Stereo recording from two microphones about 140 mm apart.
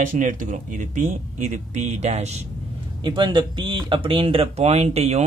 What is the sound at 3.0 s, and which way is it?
Speech, 35° right (ahead or behind).